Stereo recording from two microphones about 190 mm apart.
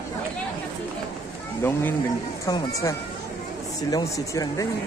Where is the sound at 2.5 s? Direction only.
15° left (ahead or behind).